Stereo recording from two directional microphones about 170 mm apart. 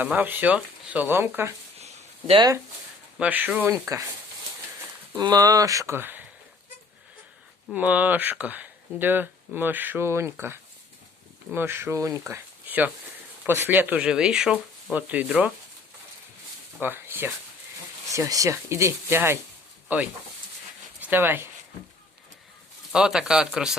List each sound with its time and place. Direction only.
0.0 s speech: 10° right (ahead or behind)
1.8 s a sound: 40° right (ahead or behind)
3.2 s speech: 10° right (ahead or behind)
5.1 s speech: 25° right (ahead or behind)
7.7 s speech: 10° right (ahead or behind)
12.3 s a sound: 10° right (ahead or behind)
13.4 s speech: 10° right (ahead or behind)
16.8 s speech: 10° right (ahead or behind)
22.9 s speech: 5° right (ahead or behind)